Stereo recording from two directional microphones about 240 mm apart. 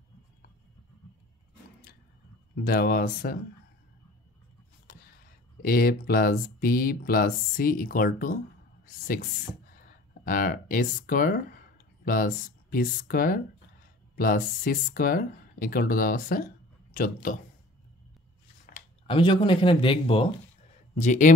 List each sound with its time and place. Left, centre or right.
2.5 s speech: left
4.9 s a sound: left
5.6 s speech: left
19.0 s speech: centre